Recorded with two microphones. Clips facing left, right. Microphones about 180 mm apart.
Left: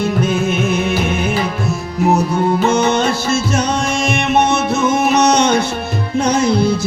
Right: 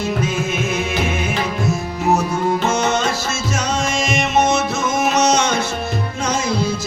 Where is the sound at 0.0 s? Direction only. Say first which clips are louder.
Left 5 dB; 60° left (ahead or behind).